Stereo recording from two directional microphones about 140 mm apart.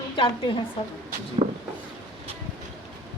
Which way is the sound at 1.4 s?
45° right (ahead or behind).